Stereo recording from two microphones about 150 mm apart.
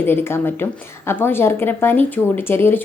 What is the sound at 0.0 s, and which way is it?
A woman's voice, 15° left (ahead or behind).